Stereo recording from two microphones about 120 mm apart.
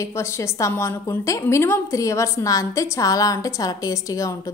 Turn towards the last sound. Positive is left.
turn(degrees=30)  # may be behind; listen again after turning